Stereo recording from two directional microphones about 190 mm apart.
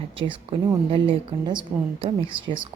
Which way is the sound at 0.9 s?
25° right (ahead or behind).